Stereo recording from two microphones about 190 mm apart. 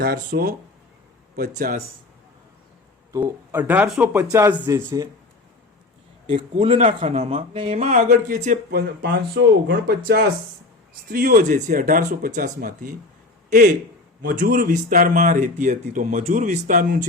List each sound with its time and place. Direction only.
0.0 s speech: 55° right (ahead or behind)
3.1 s speech: 20° right (ahead or behind)
6.3 s speech: 30° right (ahead or behind)
8.8 s speech: 55° right (ahead or behind)
11.1 s speech: 45° right (ahead or behind)